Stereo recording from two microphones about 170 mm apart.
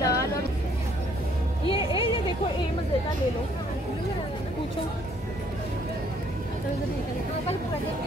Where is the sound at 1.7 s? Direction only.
30° left (ahead or behind).